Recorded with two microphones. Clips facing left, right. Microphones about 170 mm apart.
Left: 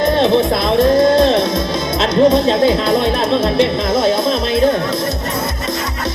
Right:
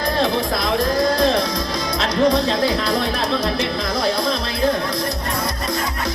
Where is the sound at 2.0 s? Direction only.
25° left (ahead or behind).